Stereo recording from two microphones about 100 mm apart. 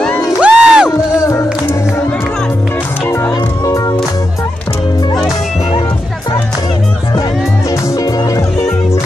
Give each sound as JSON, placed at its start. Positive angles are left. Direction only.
{"t": 0.4, "sound": "music", "side_deg": -10}
{"t": 1.2, "sound": "music", "side_deg": 25}